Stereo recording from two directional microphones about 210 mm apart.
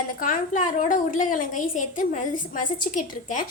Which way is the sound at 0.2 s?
35° left (ahead or behind).